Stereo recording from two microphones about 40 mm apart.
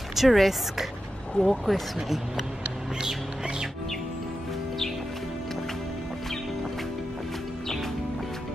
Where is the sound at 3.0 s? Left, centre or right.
Centre.